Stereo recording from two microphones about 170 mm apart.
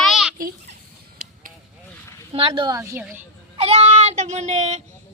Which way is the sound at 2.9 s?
10° right (ahead or behind).